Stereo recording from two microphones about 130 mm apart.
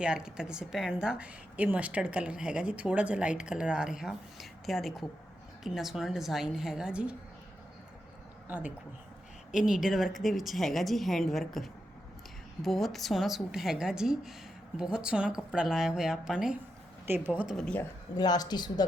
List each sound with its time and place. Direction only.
0.0 s a woman's voice: 5° right (ahead or behind)
9.5 s a woman's voice: 5° right (ahead or behind)
17.1 s speech: 15° right (ahead or behind)
17.4 s a woman's voice: 5° left (ahead or behind)
18.2 s speech: 30° left (ahead or behind)